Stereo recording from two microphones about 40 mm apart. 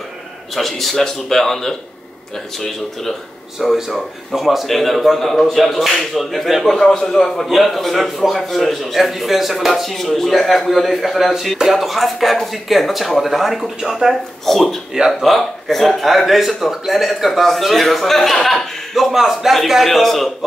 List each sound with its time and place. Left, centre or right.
0.6 s speech: centre
14.4 s speech: centre
19.1 s speech: centre